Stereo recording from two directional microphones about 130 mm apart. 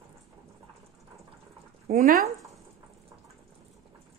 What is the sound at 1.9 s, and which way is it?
Speech, 90° right.